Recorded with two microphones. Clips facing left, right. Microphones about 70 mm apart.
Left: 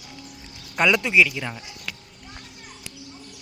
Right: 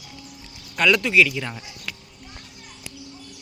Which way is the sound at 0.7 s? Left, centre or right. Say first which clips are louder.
Right 1 dB; centre.